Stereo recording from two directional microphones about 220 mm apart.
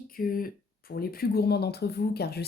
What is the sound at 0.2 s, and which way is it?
Speech, 40° left (ahead or behind).